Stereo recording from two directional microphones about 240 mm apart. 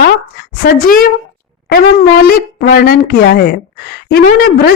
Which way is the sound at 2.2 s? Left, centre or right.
Left.